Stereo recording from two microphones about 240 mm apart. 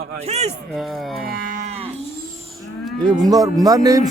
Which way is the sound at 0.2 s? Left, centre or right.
Right.